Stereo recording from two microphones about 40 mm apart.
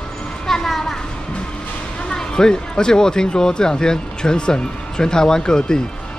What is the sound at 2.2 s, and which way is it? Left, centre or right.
Speech, centre.